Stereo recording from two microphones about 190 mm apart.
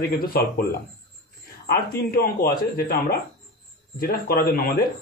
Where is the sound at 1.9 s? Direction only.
50° left (ahead or behind).